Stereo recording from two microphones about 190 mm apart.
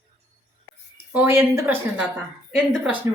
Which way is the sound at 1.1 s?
10° right (ahead or behind).